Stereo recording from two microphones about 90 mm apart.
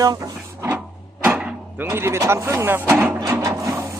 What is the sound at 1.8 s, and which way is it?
Speech, 25° right (ahead or behind).